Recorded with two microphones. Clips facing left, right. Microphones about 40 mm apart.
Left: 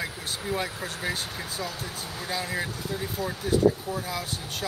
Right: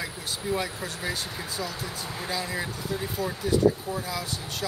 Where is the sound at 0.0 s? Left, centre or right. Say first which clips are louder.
Even; centre.